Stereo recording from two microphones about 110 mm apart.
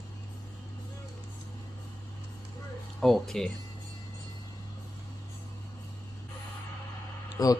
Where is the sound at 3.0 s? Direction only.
Centre (ahead or behind).